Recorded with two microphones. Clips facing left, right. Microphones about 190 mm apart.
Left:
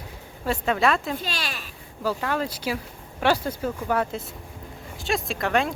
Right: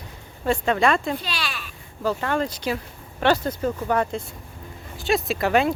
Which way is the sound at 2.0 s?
5° left (ahead or behind).